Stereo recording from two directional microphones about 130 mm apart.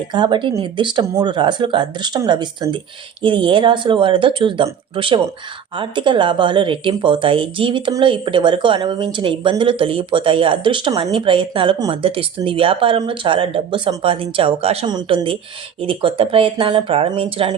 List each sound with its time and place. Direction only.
0.1 s speech: 35° right (ahead or behind)